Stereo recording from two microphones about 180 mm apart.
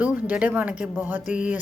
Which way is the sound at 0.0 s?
10° right (ahead or behind).